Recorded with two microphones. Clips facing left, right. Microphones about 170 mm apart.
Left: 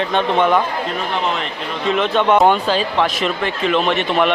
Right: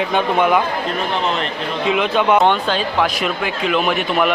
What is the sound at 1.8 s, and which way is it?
Speech, 5° right (ahead or behind).